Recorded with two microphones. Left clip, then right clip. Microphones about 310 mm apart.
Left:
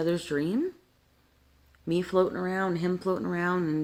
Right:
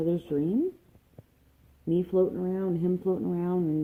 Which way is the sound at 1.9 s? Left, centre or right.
Left.